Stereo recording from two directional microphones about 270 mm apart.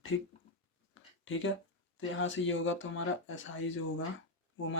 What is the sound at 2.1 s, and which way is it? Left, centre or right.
Speech, left.